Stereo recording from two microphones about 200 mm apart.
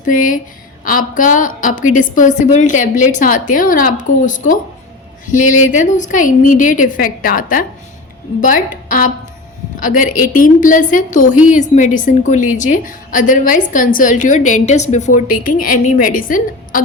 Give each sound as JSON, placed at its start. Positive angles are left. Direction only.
{"t": 0.0, "sound": "a woman's voice", "side_deg": 40}